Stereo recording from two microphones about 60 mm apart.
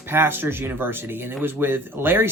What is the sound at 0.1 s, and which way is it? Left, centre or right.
Speech, right.